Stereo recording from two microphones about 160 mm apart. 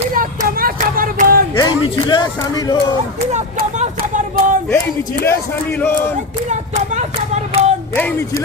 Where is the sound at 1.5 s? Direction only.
25° left (ahead or behind).